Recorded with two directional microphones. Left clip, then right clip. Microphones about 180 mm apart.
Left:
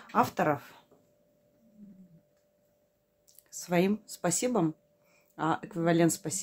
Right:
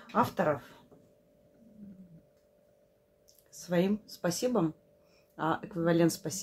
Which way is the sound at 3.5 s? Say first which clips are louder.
Left 2 dB; 35° left (ahead or behind).